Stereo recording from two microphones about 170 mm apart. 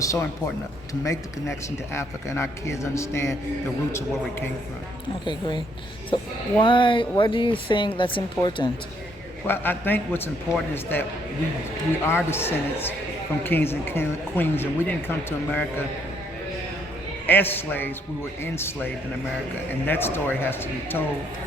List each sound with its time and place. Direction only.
0.0 s speech: 20° left (ahead or behind)
5.2 s speech: 25° left (ahead or behind)
9.5 s speech: 10° left (ahead or behind)
17.2 s speech: 10° left (ahead or behind)
19.9 s speech: 10° left (ahead or behind)